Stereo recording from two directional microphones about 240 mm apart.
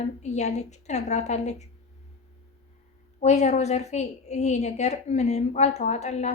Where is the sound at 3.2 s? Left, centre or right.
Left.